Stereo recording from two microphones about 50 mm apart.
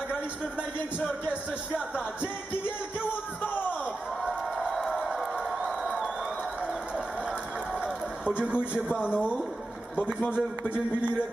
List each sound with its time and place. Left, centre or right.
1.2 s a man's voice: right
4.9 s a sound: centre
5.6 s crowd: centre
8.2 s a man's voice: right